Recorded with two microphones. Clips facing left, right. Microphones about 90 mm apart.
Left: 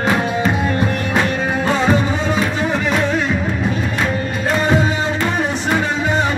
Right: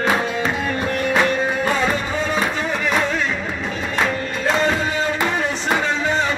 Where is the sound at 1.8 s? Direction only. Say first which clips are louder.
Left 4 dB; 20° left (ahead or behind).